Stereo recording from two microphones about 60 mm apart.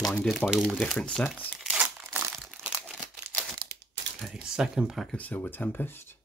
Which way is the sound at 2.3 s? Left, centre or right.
Centre.